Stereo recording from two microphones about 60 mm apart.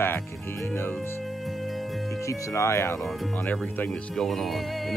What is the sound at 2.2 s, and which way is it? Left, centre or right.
Speech, left.